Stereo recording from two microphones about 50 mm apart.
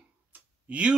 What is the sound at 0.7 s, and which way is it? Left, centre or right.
Speech, right.